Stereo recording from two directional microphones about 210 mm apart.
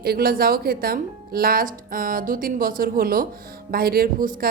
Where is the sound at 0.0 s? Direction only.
45° right (ahead or behind).